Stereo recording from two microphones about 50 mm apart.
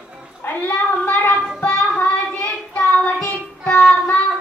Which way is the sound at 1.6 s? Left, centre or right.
Left.